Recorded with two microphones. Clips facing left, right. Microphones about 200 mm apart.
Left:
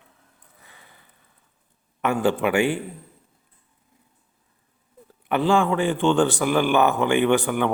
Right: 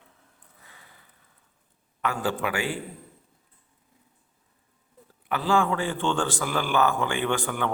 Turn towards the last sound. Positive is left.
turn(degrees=15)  # may be behind; listen again after turning